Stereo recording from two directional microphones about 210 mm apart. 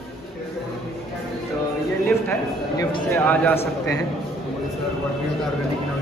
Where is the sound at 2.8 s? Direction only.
15° left (ahead or behind).